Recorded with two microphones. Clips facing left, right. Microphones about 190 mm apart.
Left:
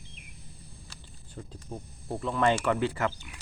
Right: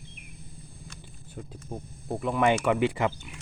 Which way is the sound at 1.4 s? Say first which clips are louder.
Right 2 dB; 10° right (ahead or behind).